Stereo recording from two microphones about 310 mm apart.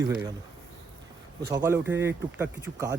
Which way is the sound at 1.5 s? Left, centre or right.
Centre.